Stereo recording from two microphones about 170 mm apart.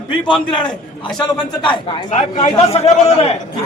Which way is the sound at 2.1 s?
45° left (ahead or behind).